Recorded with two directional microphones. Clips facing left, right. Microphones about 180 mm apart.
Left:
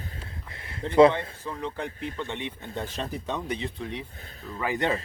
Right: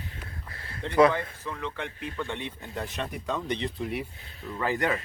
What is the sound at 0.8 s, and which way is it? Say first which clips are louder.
A man's voice: left 3 dB; 25° left (ahead or behind).